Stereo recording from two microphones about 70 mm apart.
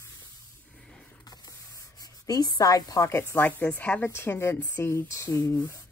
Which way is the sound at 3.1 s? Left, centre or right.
Left.